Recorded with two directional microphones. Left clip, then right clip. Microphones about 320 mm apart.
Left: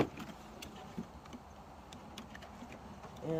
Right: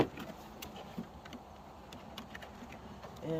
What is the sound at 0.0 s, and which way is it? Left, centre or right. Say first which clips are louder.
Vehicle: right 2 dB; centre.